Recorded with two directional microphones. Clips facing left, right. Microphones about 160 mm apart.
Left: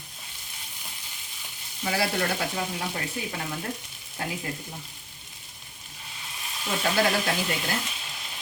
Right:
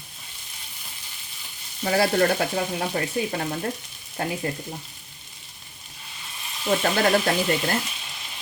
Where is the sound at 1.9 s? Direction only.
45° right (ahead or behind).